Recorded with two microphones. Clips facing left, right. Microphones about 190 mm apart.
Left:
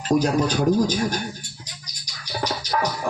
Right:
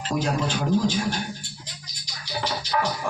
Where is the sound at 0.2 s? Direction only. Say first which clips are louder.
Left 5 dB; 40° left (ahead or behind).